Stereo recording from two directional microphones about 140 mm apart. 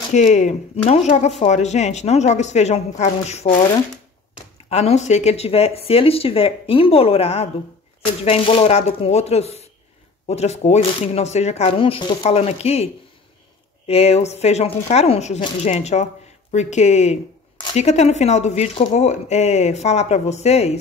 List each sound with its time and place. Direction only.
0.1 s speech: 60° left (ahead or behind)
4.6 s speech: 50° left (ahead or behind)